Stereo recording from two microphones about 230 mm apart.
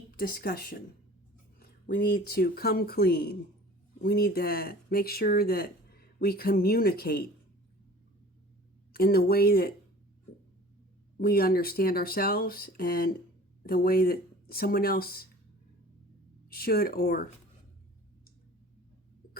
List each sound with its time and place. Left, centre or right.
0.2 s speech: left
8.9 s speech: left
11.2 s speech: left
16.5 s speech: left